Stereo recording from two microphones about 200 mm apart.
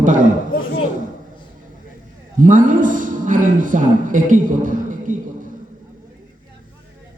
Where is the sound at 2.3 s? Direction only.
40° right (ahead or behind).